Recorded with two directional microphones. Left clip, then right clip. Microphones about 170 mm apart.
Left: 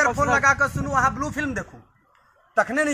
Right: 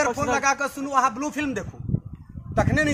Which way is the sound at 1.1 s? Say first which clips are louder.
Left 1 dB; 45° right (ahead or behind).